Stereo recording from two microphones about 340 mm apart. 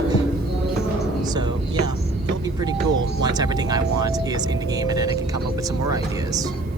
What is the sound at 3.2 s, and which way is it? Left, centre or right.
Speech, centre.